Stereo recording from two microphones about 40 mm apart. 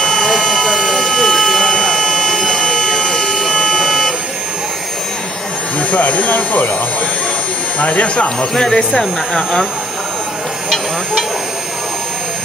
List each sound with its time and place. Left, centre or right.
0.0 s a sound: centre
5.8 s speech: left
7.8 s speech: left
8.5 s speech: centre